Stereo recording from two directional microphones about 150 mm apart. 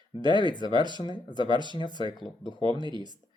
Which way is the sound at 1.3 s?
30° right (ahead or behind).